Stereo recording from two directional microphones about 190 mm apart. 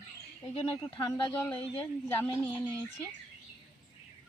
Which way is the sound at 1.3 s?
10° left (ahead or behind).